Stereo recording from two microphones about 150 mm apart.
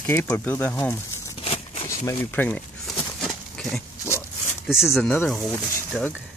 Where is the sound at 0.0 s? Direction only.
10° left (ahead or behind).